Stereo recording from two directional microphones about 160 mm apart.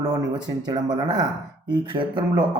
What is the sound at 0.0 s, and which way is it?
Speech, 25° right (ahead or behind).